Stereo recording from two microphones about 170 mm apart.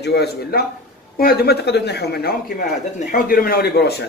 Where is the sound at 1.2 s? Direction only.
65° left (ahead or behind).